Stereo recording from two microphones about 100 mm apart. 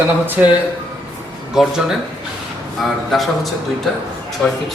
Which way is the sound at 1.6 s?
5° right (ahead or behind).